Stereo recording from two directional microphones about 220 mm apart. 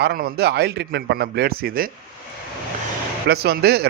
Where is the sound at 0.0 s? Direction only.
45° right (ahead or behind).